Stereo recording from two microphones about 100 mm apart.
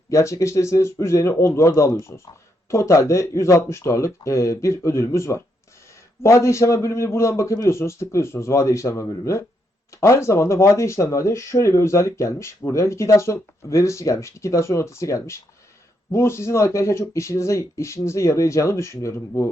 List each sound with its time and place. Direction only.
0.1 s speech: 30° left (ahead or behind)